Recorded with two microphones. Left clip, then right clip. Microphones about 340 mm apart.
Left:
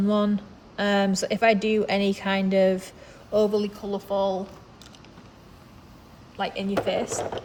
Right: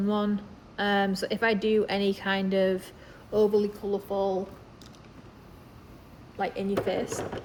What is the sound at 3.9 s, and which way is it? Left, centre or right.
Speech, left.